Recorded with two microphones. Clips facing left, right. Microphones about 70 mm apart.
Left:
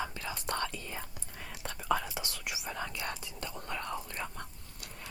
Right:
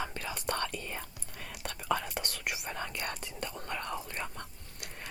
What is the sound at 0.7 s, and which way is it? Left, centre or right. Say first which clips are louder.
Whispering: right 2 dB; right.